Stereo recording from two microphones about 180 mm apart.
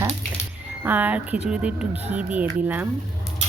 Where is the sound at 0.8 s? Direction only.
10° right (ahead or behind).